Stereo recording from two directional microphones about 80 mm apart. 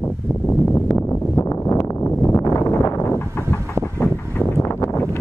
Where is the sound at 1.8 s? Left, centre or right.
Left.